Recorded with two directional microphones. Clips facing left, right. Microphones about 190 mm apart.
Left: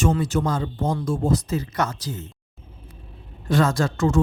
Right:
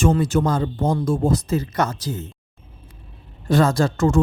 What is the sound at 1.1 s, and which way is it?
Speech, 55° right (ahead or behind).